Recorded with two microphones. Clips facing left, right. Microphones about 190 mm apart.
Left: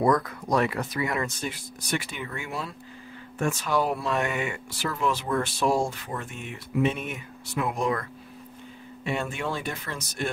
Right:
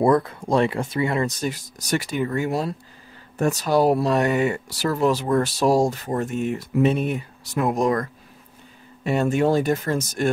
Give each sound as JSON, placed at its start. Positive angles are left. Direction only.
{"t": 0.0, "sound": "speech", "side_deg": -30}